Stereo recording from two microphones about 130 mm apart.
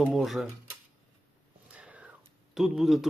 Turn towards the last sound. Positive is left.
turn(degrees=0)  # may be behind; listen again after turning